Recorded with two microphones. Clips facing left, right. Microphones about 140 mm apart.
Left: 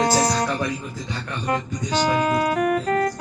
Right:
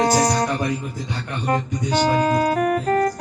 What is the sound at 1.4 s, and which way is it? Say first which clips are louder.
Speech: right 3 dB; 35° right (ahead or behind).